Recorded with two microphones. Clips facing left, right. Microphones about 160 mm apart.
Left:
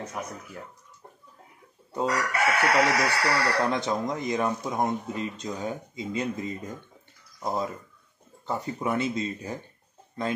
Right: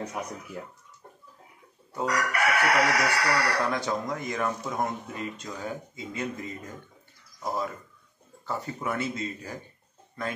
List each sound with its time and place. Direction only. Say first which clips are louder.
0.2 s speech: left 2 dB; 5° right (ahead or behind)
1.9 s chicken: left 1 dB; 25° left (ahead or behind)